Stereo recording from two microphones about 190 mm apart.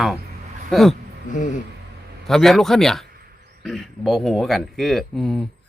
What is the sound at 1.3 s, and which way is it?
Speech, 40° left (ahead or behind).